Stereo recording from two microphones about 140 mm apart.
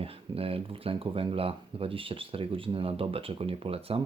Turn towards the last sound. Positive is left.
turn(degrees=-40)  # may be behind; listen again after turning